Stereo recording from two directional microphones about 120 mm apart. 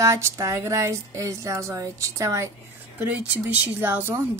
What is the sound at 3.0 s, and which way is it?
Speech, 15° right (ahead or behind).